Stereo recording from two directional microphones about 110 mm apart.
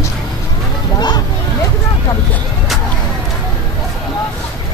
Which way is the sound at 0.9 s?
40° left (ahead or behind).